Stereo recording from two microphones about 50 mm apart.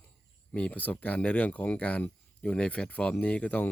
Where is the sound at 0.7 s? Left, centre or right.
Left.